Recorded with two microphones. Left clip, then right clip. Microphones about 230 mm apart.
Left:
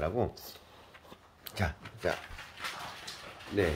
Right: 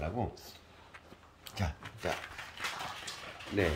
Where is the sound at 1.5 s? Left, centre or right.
Centre.